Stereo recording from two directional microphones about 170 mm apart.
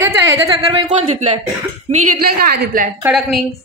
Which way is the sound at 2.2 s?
65° right (ahead or behind).